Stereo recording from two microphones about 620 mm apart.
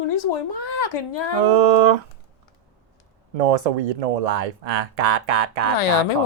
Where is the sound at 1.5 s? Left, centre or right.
Right.